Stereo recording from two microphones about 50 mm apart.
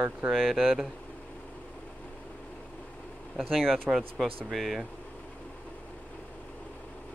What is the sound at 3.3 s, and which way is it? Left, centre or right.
Speech, centre.